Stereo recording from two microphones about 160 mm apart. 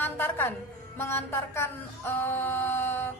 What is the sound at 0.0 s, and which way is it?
Music, 15° left (ahead or behind).